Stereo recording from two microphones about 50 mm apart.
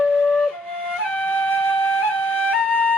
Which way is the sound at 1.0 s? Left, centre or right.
Left.